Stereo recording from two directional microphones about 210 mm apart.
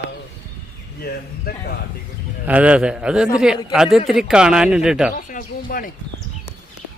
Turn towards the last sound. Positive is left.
turn(degrees=40)  # may be behind; listen again after turning